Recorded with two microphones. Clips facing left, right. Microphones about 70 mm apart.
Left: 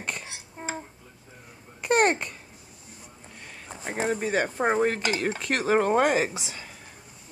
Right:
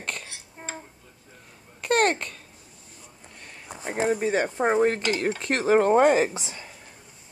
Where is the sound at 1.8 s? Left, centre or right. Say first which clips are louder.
Even; centre.